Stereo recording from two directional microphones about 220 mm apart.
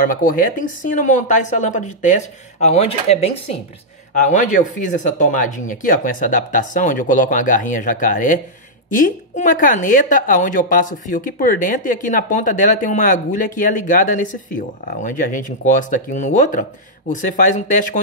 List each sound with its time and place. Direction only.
0.0 s a woman's voice: 40° left (ahead or behind)